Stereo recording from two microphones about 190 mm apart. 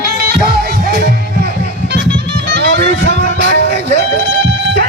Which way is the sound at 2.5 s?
60° right (ahead or behind).